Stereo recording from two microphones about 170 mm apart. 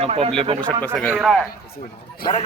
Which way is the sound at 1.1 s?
Centre (ahead or behind).